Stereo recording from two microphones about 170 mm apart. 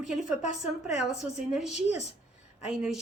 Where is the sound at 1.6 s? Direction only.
5° right (ahead or behind).